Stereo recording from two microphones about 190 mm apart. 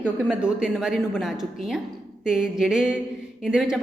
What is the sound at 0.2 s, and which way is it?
A woman's voice, 5° right (ahead or behind).